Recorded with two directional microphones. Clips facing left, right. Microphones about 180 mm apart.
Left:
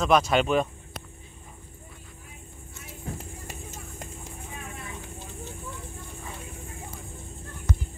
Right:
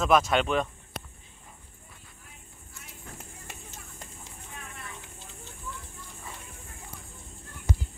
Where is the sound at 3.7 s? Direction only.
50° left (ahead or behind).